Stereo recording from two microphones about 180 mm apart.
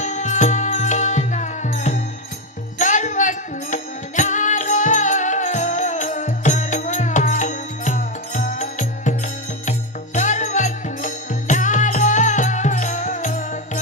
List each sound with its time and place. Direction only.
0.0 s music: 40° left (ahead or behind)